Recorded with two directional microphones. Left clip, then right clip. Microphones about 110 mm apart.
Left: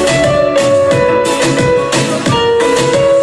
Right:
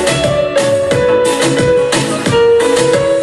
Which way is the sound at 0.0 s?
25° right (ahead or behind).